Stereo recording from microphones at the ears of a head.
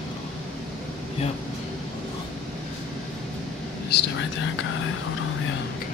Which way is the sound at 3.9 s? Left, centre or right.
Left.